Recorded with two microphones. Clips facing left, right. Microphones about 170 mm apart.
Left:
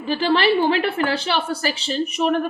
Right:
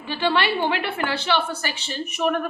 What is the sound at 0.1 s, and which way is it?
Speech, 40° left (ahead or behind).